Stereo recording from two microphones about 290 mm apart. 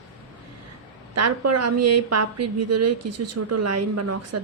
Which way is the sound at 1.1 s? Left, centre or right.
Right.